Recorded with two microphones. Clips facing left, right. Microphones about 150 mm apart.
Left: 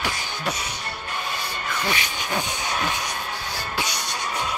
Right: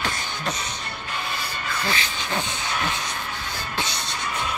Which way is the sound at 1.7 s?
15° left (ahead or behind).